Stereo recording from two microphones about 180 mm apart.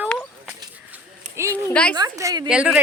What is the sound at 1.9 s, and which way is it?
Speech, 20° right (ahead or behind).